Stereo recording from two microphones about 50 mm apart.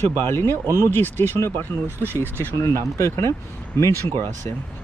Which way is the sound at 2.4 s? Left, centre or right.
Left.